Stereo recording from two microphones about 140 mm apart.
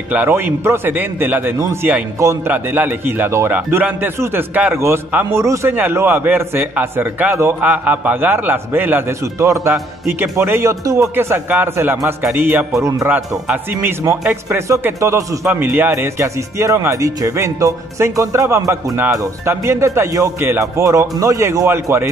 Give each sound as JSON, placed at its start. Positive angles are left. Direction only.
{"t": 0.1, "sound": "a man's voice", "side_deg": -15}